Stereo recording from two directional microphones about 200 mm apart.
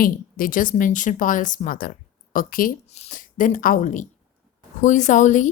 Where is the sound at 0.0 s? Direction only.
45° left (ahead or behind).